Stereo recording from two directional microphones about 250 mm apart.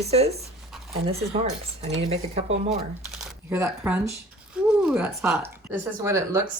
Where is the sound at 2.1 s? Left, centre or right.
Right.